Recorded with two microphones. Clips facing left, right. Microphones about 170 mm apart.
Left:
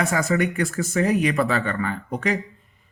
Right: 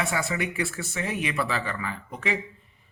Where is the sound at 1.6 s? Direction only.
Centre (ahead or behind).